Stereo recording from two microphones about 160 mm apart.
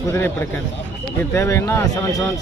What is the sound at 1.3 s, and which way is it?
Speech, 20° left (ahead or behind).